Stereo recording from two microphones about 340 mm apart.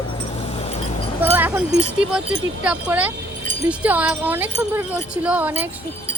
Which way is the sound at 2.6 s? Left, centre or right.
Centre.